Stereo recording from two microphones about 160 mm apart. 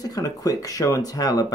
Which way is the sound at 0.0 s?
20° left (ahead or behind).